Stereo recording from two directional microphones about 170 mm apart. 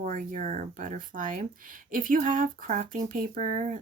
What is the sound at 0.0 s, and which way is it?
Speech, 50° right (ahead or behind).